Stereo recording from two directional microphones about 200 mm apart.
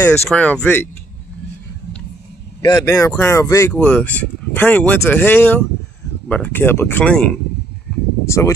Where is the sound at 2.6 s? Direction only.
15° left (ahead or behind).